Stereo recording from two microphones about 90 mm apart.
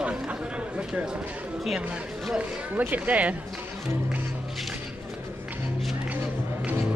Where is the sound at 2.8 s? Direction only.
15° right (ahead or behind).